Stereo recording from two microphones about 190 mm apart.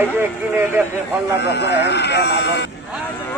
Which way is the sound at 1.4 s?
60° left (ahead or behind).